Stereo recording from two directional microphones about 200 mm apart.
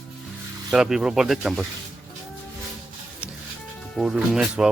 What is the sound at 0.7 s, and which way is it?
Speech, centre (ahead or behind).